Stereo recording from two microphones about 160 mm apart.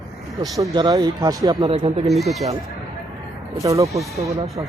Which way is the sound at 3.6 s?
20° right (ahead or behind).